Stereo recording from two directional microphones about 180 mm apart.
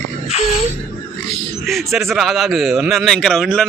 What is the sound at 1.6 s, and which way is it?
A man's voice, centre (ahead or behind).